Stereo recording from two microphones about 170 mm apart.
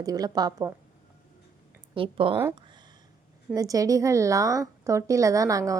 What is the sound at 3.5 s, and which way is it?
A woman's voice, 20° right (ahead or behind).